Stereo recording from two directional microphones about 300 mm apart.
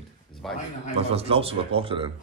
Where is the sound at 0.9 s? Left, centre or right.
Centre.